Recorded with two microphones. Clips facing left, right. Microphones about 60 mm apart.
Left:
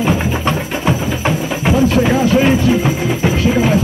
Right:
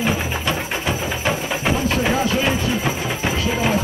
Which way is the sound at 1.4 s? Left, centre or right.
Centre.